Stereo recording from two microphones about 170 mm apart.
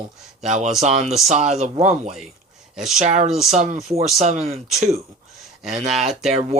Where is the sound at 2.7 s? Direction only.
Centre (ahead or behind).